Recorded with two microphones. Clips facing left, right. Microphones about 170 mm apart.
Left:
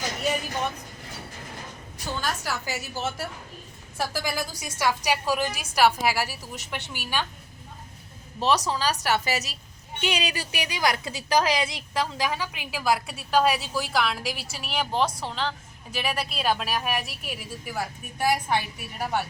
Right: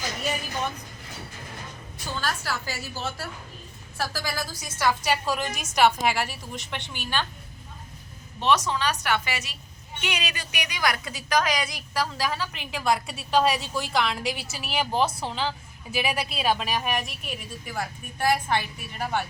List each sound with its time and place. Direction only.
2.1 s a woman's voice: 15° left (ahead or behind)
8.4 s a woman's voice: 35° left (ahead or behind); by 19.2 s 10° left (ahead or behind)